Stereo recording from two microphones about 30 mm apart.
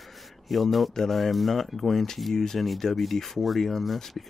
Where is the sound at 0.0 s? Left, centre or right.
Centre.